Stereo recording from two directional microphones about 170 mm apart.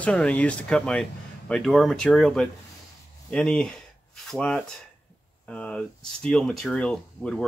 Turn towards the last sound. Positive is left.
turn(degrees=5)  # may be behind; listen again after turning